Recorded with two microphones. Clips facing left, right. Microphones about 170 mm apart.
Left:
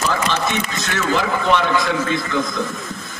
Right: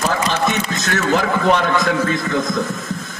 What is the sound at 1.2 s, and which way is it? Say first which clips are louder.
Speech: right 1 dB; 45° right (ahead or behind).